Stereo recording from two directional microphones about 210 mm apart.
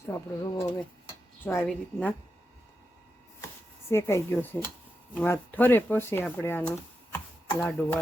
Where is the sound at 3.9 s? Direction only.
10° left (ahead or behind).